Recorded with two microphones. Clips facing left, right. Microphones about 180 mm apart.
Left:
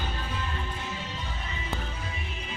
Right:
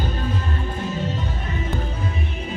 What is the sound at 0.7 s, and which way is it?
Music, 50° right (ahead or behind).